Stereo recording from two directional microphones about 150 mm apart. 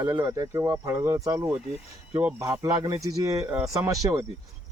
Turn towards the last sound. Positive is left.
turn(degrees=-20)  # may be behind; listen again after turning